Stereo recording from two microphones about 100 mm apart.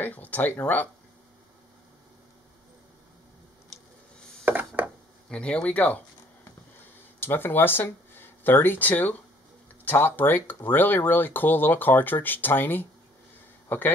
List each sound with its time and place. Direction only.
0.0 s speech: 15° left (ahead or behind)
4.5 s a sound: 15° right (ahead or behind)
5.3 s speech: 10° left (ahead or behind)
7.2 s speech: 20° left (ahead or behind)